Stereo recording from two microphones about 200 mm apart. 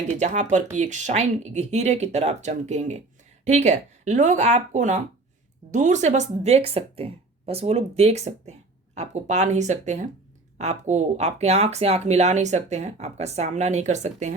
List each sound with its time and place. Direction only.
0.1 s speech: 35° right (ahead or behind)